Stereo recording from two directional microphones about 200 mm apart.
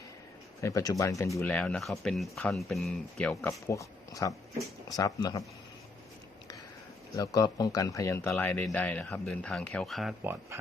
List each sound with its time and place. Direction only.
0.6 s speech: 15° left (ahead or behind)
7.2 s speech: 20° left (ahead or behind); by 10.3 s centre (ahead or behind)